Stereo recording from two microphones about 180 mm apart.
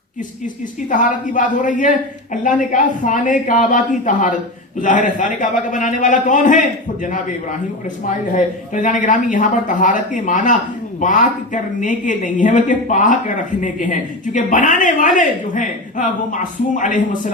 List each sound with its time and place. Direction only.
0.4 s a man's voice: 45° left (ahead or behind)
8.7 s a man's voice: 45° left (ahead or behind)